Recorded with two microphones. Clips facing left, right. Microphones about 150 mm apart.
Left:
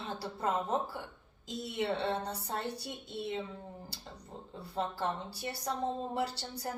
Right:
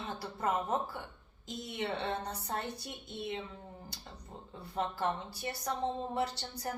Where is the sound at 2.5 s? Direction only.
30° left (ahead or behind).